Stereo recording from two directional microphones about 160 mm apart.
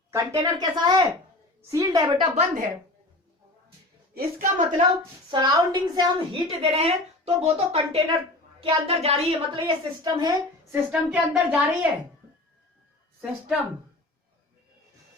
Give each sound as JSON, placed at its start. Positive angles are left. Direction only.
{"t": 0.1, "sound": "a woman's voice", "side_deg": -20}
{"t": 2.3, "sound": "a woman's voice", "side_deg": -45}
{"t": 4.1, "sound": "a woman's voice", "side_deg": -65}
{"t": 5.3, "sound": "a woman's voice", "side_deg": -25}
{"t": 10.7, "sound": "a woman's voice", "side_deg": -5}